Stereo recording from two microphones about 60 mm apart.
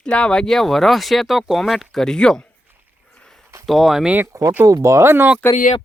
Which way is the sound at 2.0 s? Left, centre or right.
Centre.